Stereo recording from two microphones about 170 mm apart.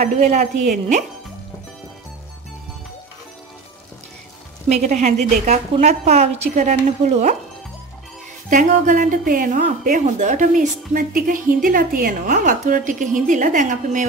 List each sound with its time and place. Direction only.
0.0 s a woman's voice: 40° right (ahead or behind)
4.6 s a woman's voice: 40° right (ahead or behind)
8.5 s a woman's voice: 50° right (ahead or behind)